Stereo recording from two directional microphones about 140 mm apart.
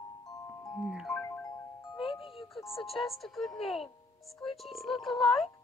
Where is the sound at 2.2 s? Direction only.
40° left (ahead or behind).